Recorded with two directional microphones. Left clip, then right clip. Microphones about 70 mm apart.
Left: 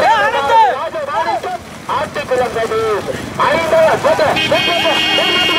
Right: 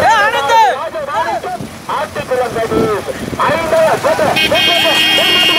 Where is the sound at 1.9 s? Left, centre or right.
Centre.